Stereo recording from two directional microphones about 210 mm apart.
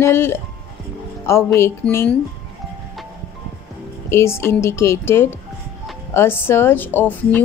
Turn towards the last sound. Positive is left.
turn(degrees=10)  # may be behind; listen again after turning